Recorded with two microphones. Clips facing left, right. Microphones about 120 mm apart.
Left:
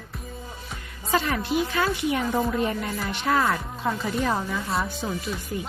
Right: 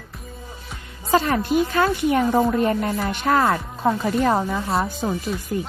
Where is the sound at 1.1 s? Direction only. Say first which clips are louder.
Right 5 dB; 45° right (ahead or behind).